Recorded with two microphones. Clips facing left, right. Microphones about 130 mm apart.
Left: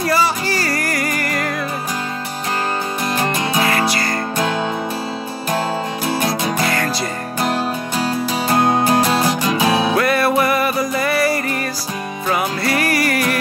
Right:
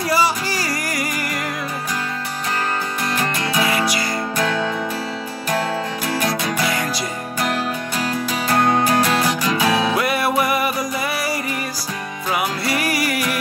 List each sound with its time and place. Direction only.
0.1 s music: 10° right (ahead or behind)
3.2 s music: 25° left (ahead or behind)
8.5 s music: 20° left (ahead or behind)
9.9 s music: 10° right (ahead or behind)